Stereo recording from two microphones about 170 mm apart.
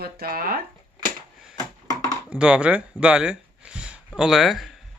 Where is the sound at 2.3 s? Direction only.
5° right (ahead or behind).